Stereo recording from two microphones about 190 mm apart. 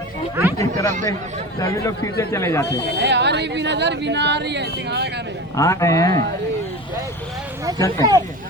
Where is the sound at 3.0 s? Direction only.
65° right (ahead or behind).